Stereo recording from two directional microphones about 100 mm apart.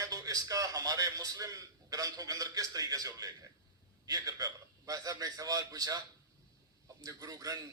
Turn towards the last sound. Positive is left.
turn(degrees=-40)  # may be behind; listen again after turning